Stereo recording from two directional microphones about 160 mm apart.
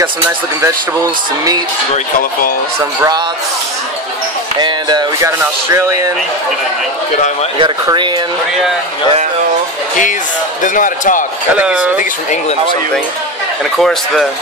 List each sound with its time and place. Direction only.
4.6 s speech: 25° right (ahead or behind)
7.5 s speech: 30° right (ahead or behind)
10.6 s speech: 55° left (ahead or behind)
11.5 s speech: 5° right (ahead or behind)
12.0 s speech: 50° left (ahead or behind)
13.7 s speech: centre (ahead or behind)